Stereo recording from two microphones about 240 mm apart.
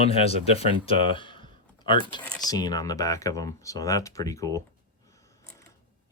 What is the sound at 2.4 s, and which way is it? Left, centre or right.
Speech, centre.